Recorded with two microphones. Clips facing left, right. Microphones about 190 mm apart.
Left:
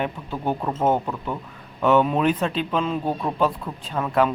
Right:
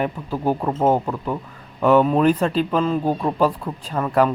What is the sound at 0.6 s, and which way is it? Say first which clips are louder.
Speech: right 1 dB; 15° right (ahead or behind).